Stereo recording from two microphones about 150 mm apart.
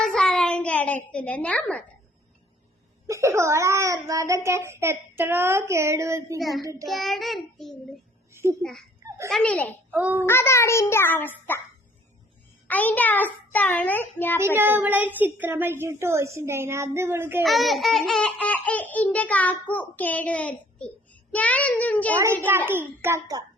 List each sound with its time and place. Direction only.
0.0 s child singing: 5° left (ahead or behind)
1.1 s a child's voice: 10° left (ahead or behind)
3.1 s a child's voice: 20° right (ahead or behind)
6.8 s child singing: centre (ahead or behind)
8.3 s a sound: 15° right (ahead or behind)
9.0 s baby laughter: 20° right (ahead or behind)
9.3 s a child's voice: 10° left (ahead or behind)
9.9 s a woman's voice: 10° right (ahead or behind)
10.2 s a child's voice: 15° left (ahead or behind)
12.6 s a child's voice: 10° left (ahead or behind)
14.3 s a woman's voice: 15° right (ahead or behind)
17.4 s a child's voice: centre (ahead or behind)
22.4 s a woman's voice: 15° right (ahead or behind)